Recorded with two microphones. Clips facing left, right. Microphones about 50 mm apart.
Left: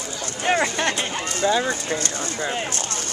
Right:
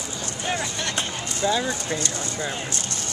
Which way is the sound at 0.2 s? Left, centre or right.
Left.